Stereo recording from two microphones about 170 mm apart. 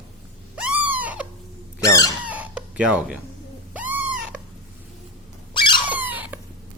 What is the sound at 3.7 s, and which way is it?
Owl, 10° right (ahead or behind).